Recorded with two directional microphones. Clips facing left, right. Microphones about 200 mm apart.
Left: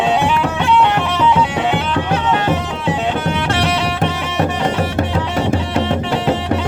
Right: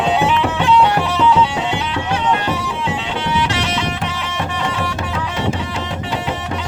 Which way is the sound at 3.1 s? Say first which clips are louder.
Left 1 dB; 55° left (ahead or behind).